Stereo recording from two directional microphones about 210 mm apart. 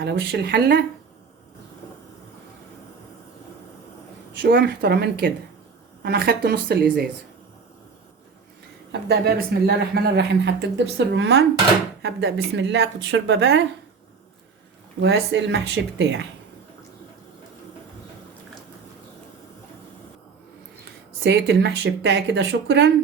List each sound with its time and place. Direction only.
0.0 s speech: 55° right (ahead or behind)
4.4 s speech: 55° right (ahead or behind)
8.9 s speech: 50° right (ahead or behind)
15.0 s speech: 55° right (ahead or behind)
21.2 s speech: 55° right (ahead or behind)